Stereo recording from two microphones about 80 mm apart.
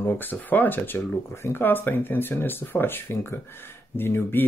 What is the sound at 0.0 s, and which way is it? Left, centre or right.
Speech, left.